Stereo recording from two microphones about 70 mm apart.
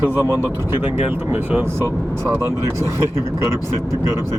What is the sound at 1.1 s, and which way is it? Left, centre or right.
Speech, right.